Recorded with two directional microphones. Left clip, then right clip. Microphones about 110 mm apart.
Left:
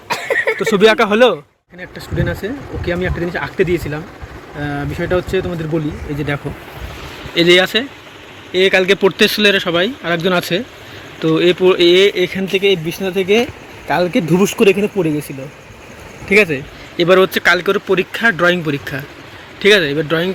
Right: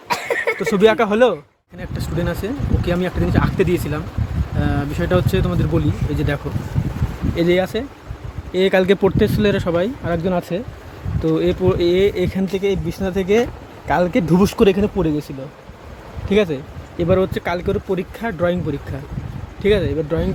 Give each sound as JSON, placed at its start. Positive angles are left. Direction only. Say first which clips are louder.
{"t": 0.1, "sound": "a sound", "louder": "left 3 dB", "side_deg": 40}
{"t": 0.7, "sound": "speech", "louder": "left 3 dB", "side_deg": 0}
{"t": 7.3, "sound": "speech", "louder": "left 7 dB", "side_deg": -5}
{"t": 8.5, "sound": "speech", "louder": "left 3 dB", "side_deg": -35}
{"t": 9.0, "sound": "speech", "louder": "left 5 dB", "side_deg": -15}
{"t": 9.4, "sound": "speech", "louder": "left 5 dB", "side_deg": -30}
{"t": 10.2, "sound": "speech", "louder": "left 6 dB", "side_deg": 5}
{"t": 12.0, "sound": "speech", "louder": "left 4 dB", "side_deg": -25}
{"t": 12.4, "sound": "speech", "louder": "left 6 dB", "side_deg": 0}
{"t": 16.3, "sound": "speech", "louder": "left 6 dB", "side_deg": -5}